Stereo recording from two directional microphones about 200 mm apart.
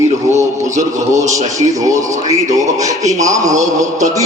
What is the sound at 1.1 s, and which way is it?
Speech, 35° right (ahead or behind).